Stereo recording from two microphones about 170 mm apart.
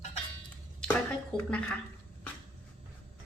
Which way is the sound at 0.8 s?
5° left (ahead or behind).